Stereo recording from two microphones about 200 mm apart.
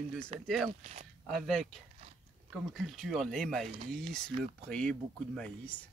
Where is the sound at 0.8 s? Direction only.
35° right (ahead or behind).